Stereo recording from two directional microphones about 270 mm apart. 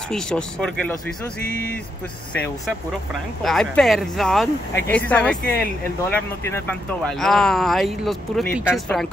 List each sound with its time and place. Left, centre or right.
0.1 s speech: centre
2.3 s speech: centre